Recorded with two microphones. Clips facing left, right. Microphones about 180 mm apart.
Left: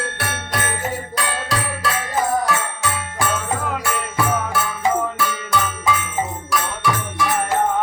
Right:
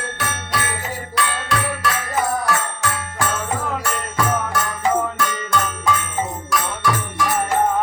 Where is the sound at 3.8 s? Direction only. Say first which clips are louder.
Even; 5° left (ahead or behind).